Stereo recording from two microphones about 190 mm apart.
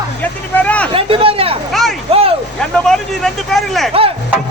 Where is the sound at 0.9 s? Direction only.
30° right (ahead or behind).